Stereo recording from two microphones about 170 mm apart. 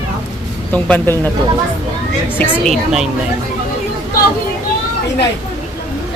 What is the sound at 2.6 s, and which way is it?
Speech, centre (ahead or behind).